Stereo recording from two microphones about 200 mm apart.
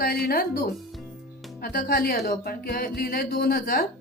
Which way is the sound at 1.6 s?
50° left (ahead or behind).